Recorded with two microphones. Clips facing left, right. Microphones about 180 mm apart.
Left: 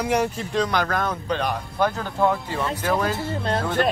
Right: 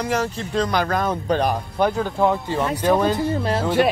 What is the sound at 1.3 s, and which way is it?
Speech, 40° right (ahead or behind).